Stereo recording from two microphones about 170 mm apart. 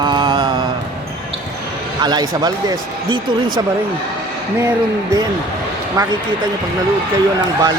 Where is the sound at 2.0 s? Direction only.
25° right (ahead or behind).